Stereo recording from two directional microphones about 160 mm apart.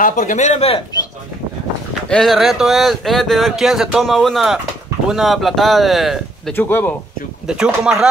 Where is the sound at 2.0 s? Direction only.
5° left (ahead or behind).